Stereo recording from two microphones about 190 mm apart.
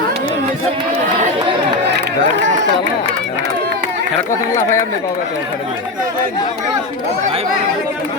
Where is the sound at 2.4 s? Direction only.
40° right (ahead or behind).